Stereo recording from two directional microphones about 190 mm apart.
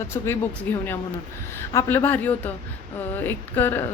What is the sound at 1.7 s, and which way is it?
A woman's voice, 10° left (ahead or behind).